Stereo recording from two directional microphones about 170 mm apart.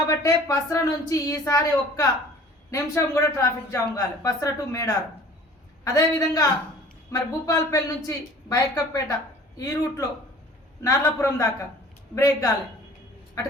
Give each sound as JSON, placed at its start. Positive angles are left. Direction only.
{"t": 0.2, "sound": "a woman's voice", "side_deg": 20}